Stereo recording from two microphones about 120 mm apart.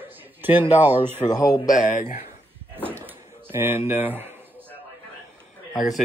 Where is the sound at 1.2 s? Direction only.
30° left (ahead or behind).